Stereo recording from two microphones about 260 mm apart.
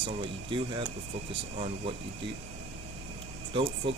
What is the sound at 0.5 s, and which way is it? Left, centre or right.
Speech, centre.